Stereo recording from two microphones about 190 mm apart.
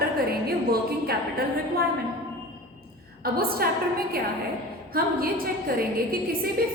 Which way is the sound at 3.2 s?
55° right (ahead or behind).